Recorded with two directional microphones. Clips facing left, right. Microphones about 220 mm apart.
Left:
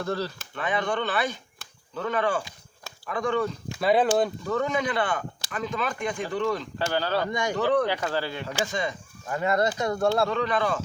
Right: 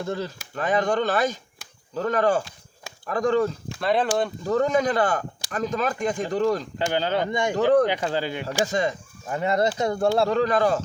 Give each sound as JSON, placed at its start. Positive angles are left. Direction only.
{"t": 0.0, "sound": "speech", "side_deg": -15}
{"t": 0.5, "sound": "speech", "side_deg": -40}
{"t": 3.7, "sound": "speech", "side_deg": 5}
{"t": 4.4, "sound": "speech", "side_deg": -35}
{"t": 6.7, "sound": "speech", "side_deg": -20}
{"t": 8.6, "sound": "speech", "side_deg": -40}
{"t": 9.3, "sound": "speech", "side_deg": -25}
{"t": 10.2, "sound": "speech", "side_deg": -40}